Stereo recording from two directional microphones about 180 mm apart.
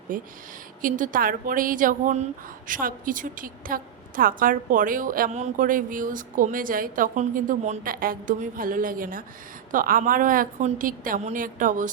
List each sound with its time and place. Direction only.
0.1 s a woman's voice: 50° right (ahead or behind)